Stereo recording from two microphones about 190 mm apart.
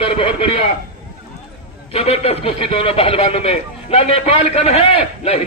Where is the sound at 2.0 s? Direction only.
30° left (ahead or behind).